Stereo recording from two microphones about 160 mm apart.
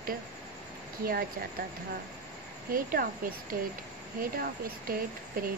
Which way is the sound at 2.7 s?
65° right (ahead or behind).